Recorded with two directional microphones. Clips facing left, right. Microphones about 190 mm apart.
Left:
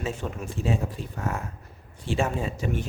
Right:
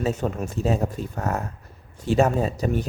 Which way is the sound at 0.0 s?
40° right (ahead or behind).